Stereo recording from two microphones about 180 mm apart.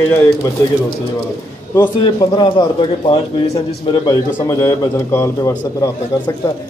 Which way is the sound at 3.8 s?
25° left (ahead or behind).